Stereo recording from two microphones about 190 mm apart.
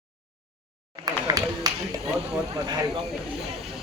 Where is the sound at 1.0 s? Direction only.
20° right (ahead or behind).